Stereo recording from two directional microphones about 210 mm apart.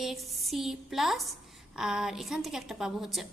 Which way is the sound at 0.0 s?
Centre (ahead or behind).